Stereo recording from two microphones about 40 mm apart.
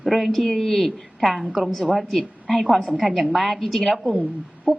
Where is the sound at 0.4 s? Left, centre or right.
Centre.